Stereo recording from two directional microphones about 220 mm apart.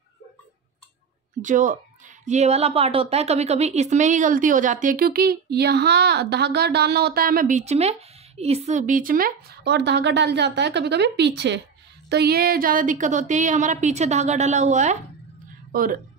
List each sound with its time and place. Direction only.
1.4 s a woman's voice: 35° right (ahead or behind)